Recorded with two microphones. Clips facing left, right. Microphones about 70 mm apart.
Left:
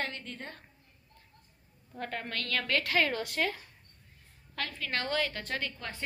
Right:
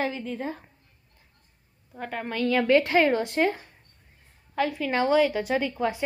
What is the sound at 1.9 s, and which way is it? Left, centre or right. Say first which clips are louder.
A woman's voice: right 5 dB; centre.